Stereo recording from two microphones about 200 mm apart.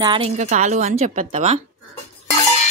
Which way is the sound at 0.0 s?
25° right (ahead or behind).